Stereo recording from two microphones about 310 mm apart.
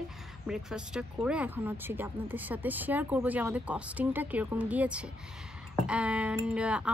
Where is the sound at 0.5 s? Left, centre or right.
Centre.